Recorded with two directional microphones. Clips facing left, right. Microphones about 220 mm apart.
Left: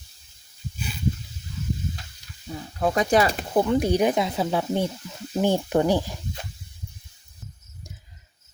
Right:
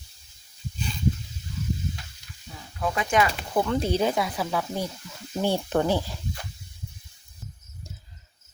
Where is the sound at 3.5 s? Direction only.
15° left (ahead or behind).